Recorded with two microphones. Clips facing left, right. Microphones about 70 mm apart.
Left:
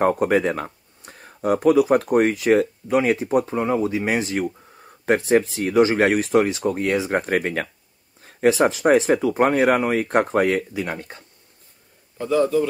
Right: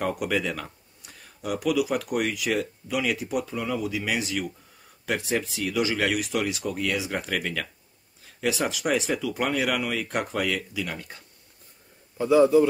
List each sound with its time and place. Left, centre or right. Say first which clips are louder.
0.0 s speech: left 8 dB; left
12.2 s a man's voice: right 2 dB; centre